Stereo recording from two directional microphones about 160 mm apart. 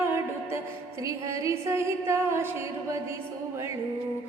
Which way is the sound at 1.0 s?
20° right (ahead or behind).